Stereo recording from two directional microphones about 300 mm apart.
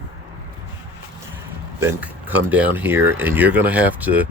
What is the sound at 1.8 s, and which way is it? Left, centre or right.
Speech, centre.